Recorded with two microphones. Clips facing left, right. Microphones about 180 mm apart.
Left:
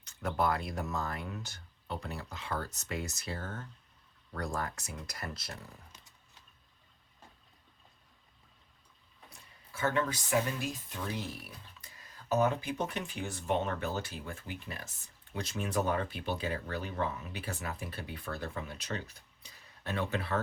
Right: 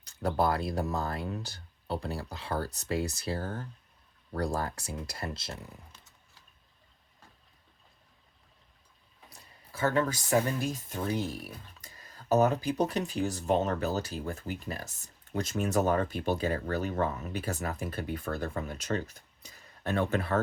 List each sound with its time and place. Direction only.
0.0 s speech: 35° right (ahead or behind)
9.7 s speech: 35° right (ahead or behind)